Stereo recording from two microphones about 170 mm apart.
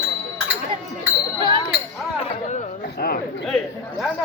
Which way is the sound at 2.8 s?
75° left (ahead or behind).